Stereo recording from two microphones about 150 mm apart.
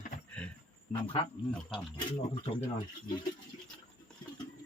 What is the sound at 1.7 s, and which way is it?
Speech, 30° left (ahead or behind).